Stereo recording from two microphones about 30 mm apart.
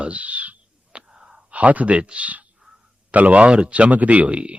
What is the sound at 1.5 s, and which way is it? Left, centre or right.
Speech, right.